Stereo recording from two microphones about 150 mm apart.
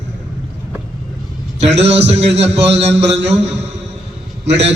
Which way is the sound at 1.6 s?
45° right (ahead or behind).